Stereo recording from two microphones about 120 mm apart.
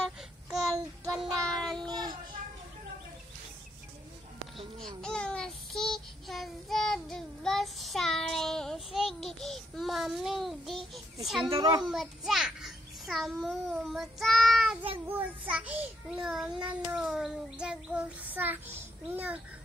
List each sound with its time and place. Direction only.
1.2 s child singing: 5° left (ahead or behind)
1.9 s child singing: 35° right (ahead or behind)
4.7 s child singing: 5° left (ahead or behind)
11.1 s a child's voice: centre (ahead or behind)
11.4 s a child's voice: 45° right (ahead or behind)
11.8 s a child's voice: 5° right (ahead or behind)
15.0 s child singing: 15° right (ahead or behind)